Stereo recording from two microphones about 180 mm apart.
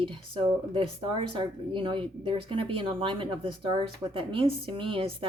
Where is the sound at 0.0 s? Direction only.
30° right (ahead or behind).